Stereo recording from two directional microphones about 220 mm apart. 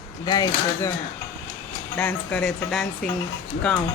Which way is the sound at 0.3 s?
15° left (ahead or behind).